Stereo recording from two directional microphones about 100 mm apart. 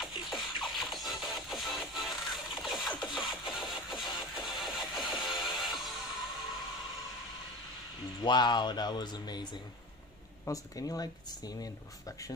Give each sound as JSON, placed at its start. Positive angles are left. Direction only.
{"t": 0.0, "sound": "music", "side_deg": 0}
{"t": 8.2, "sound": "speech", "side_deg": 45}